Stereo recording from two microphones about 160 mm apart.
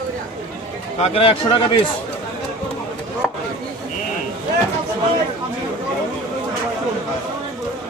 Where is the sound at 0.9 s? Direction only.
40° left (ahead or behind).